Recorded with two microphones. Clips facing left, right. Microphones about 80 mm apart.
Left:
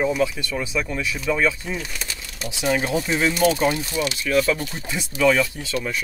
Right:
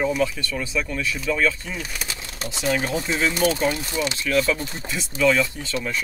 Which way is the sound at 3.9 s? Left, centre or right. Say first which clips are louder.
Left 1 dB; right.